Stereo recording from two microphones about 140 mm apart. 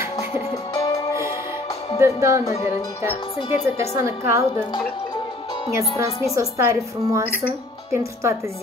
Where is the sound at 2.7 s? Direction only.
25° left (ahead or behind).